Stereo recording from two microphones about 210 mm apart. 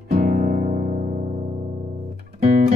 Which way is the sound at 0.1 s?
35° right (ahead or behind).